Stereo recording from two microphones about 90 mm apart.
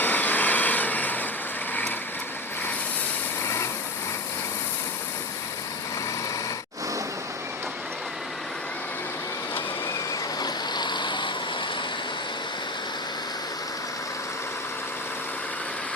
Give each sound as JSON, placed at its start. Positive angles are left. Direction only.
{"t": 0.0, "sound": "vehicle", "side_deg": 20}
{"t": 3.4, "sound": "vehicle", "side_deg": 30}
{"t": 10.4, "sound": "vehicle", "side_deg": 55}